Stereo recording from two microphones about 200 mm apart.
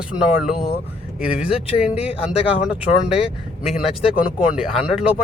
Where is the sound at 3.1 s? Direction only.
30° left (ahead or behind).